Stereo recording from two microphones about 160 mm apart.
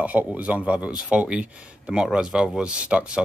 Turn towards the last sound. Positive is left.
turn(degrees=-5)  # may be behind; listen again after turning